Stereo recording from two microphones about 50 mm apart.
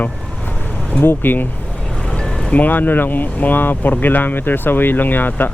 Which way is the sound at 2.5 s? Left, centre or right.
Left.